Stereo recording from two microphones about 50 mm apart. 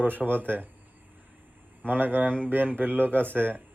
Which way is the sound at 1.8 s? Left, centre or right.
Right.